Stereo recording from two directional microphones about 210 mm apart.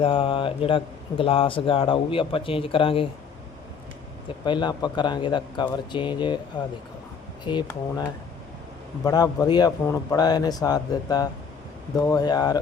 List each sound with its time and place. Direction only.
0.0 s a man's voice: 25° left (ahead or behind)
4.4 s a man's voice: 20° left (ahead or behind)
7.4 s a man's voice: 20° left (ahead or behind)